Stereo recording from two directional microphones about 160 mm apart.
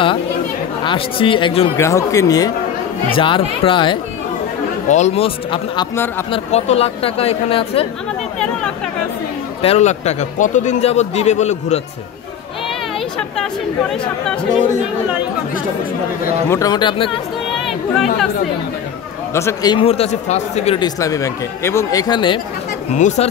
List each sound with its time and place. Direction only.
0.8 s speech: 35° left (ahead or behind)
1.8 s speech: 20° left (ahead or behind)
4.8 s speech: 45° left (ahead or behind)
9.6 s a man's voice: 40° left (ahead or behind)
13.4 s speech: 5° left (ahead or behind)
16.4 s speech: 20° left (ahead or behind)
17.6 s speech: centre (ahead or behind)
19.3 s speech: 20° left (ahead or behind)
19.8 s speech: 40° left (ahead or behind)
20.8 s speech: 20° left (ahead or behind)
22.9 s a man's voice: 50° left (ahead or behind)